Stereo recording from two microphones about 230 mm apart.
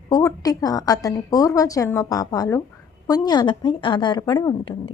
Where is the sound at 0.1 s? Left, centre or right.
Centre.